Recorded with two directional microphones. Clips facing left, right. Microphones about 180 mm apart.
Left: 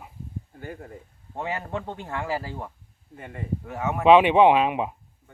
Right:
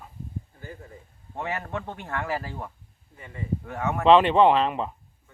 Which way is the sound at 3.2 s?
60° left (ahead or behind).